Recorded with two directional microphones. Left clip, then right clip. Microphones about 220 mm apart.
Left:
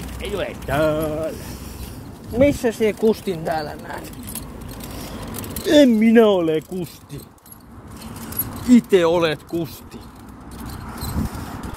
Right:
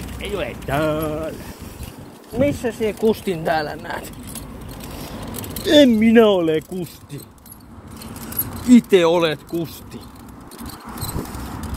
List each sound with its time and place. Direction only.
0.2 s speech: 25° right (ahead or behind)
2.3 s speech: 30° left (ahead or behind)
3.0 s speech: centre (ahead or behind)
3.4 s speech: 10° right (ahead or behind)
5.5 s speech: 5° left (ahead or behind)
8.6 s speech: 10° right (ahead or behind)